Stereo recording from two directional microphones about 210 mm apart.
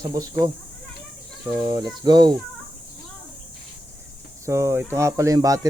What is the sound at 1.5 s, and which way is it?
Speech, 20° right (ahead or behind).